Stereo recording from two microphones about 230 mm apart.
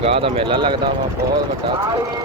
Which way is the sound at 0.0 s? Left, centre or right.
Right.